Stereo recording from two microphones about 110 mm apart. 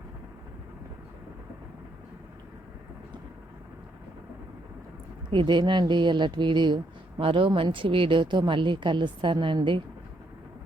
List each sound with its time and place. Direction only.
5.3 s a woman's voice: 45° right (ahead or behind)